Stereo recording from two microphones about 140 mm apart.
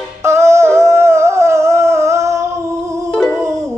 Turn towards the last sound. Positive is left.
turn(degrees=10)  # may be behind; listen again after turning